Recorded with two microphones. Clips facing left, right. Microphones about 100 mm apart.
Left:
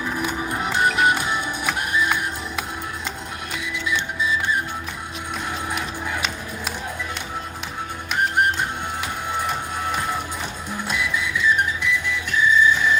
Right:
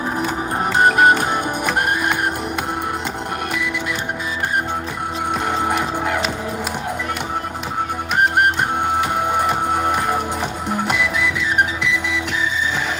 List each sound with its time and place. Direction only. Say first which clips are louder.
0.6 s music: right 6 dB; 45° right (ahead or behind)
3.5 s music: right 3 dB; 60° right (ahead or behind)
5.5 s music: right 7 dB; 70° right (ahead or behind)
9.1 s music: right 7 dB; 60° right (ahead or behind); by 13.0 s 85° right